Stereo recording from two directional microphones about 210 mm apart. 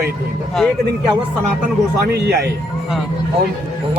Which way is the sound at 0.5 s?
Centre (ahead or behind).